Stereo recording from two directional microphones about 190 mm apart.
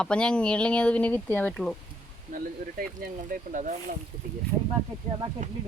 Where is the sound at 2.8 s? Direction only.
45° right (ahead or behind).